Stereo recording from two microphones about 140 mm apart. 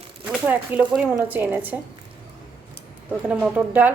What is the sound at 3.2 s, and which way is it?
Speech, 10° right (ahead or behind).